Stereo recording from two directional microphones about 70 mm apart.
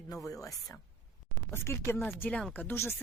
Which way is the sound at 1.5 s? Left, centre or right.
Left.